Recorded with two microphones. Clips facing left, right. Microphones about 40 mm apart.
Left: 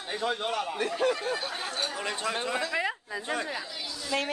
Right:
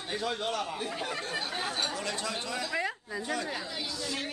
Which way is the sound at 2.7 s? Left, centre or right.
Left.